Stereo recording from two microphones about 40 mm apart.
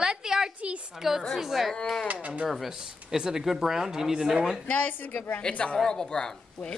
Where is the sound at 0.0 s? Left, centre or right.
Centre.